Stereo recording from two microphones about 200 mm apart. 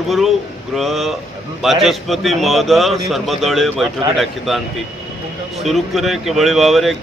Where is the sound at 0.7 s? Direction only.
Centre (ahead or behind).